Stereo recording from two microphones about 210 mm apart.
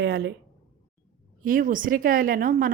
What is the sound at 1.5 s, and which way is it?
Speech, 40° right (ahead or behind).